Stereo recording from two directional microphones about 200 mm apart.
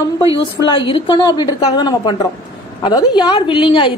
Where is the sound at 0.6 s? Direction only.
25° left (ahead or behind).